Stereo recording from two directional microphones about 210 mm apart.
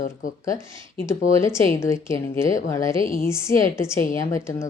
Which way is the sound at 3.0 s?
40° left (ahead or behind).